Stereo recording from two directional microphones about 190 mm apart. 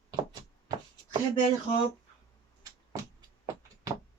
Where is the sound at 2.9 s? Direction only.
15° right (ahead or behind).